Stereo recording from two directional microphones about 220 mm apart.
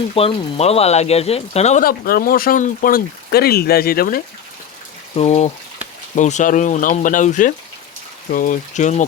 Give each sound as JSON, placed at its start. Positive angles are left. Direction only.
{"t": 0.1, "sound": "speech", "side_deg": 25}
{"t": 5.1, "sound": "speech", "side_deg": 30}